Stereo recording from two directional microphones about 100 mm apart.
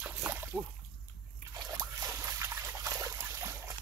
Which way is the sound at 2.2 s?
30° right (ahead or behind).